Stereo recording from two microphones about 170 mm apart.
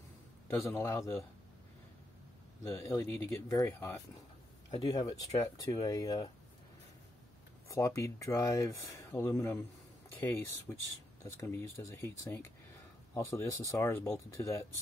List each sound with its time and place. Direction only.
0.5 s speech: 15° left (ahead or behind)
2.7 s speech: 20° left (ahead or behind)
7.6 s speech: 20° left (ahead or behind)